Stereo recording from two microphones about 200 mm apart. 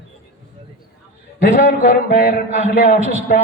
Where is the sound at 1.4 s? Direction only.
45° left (ahead or behind).